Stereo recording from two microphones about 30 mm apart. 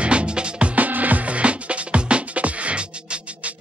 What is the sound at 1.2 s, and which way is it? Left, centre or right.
Music, right.